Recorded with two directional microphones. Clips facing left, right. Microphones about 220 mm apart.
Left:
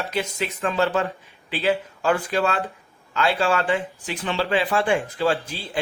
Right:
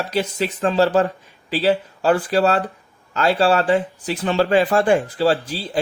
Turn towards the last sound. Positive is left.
turn(degrees=-35)  # may be behind; listen again after turning